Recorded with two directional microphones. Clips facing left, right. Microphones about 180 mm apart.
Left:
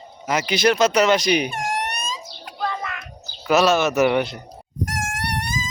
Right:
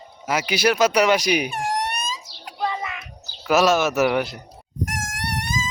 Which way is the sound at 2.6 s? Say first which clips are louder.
Right 1 dB; 10° right (ahead or behind).